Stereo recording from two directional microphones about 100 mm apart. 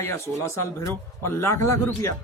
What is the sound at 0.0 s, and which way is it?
A man's voice, 25° left (ahead or behind).